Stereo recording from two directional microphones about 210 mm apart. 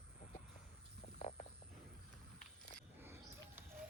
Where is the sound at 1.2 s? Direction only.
30° left (ahead or behind).